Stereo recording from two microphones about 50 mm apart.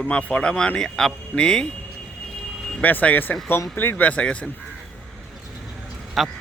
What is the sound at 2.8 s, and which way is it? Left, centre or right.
Speech, left.